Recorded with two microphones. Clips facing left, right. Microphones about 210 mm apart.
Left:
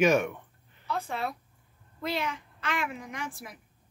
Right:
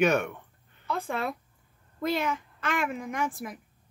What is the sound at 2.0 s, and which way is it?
A woman's voice, 50° right (ahead or behind).